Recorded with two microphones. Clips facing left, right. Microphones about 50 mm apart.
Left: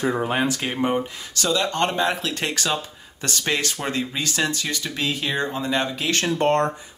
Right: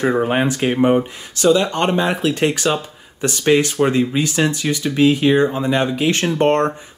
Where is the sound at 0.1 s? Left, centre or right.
Right.